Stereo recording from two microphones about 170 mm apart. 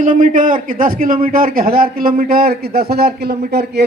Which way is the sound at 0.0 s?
50° right (ahead or behind).